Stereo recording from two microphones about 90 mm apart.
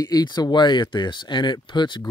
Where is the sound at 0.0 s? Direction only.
50° left (ahead or behind).